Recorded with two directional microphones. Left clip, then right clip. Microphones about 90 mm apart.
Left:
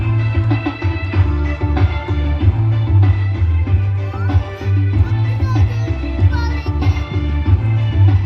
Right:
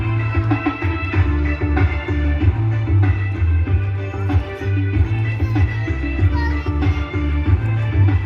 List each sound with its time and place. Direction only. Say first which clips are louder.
0.4 s music: right 1 dB; 20° left (ahead or behind)